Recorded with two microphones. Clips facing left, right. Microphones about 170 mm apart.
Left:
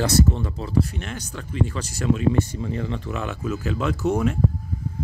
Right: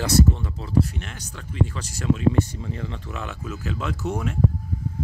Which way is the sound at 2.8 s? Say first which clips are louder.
Left 5 dB; 65° left (ahead or behind).